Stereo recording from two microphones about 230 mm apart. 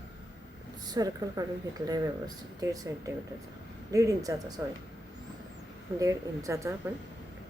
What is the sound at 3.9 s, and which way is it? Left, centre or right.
Speech, centre.